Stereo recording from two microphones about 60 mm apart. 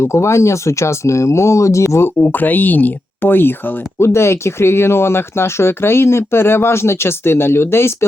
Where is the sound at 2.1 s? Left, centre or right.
Left.